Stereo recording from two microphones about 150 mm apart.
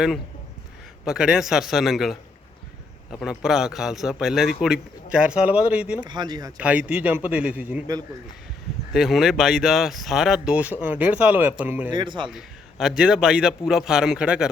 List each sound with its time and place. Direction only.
1.0 s speech: 5° right (ahead or behind)
6.0 s speech: 30° right (ahead or behind)
6.6 s a man's voice: 10° right (ahead or behind)
8.9 s speech: 5° right (ahead or behind)
11.9 s speech: 30° right (ahead or behind)
13.0 s speech: 5° right (ahead or behind)